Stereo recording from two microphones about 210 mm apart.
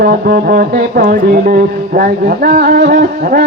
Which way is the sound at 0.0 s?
45° right (ahead or behind).